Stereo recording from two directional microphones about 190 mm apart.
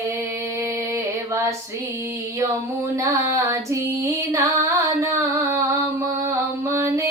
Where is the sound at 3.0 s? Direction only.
15° right (ahead or behind).